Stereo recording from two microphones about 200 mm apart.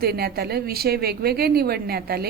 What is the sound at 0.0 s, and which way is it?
A woman's voice, 50° right (ahead or behind).